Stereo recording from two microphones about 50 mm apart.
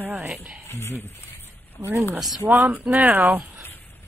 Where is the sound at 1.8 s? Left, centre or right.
Right.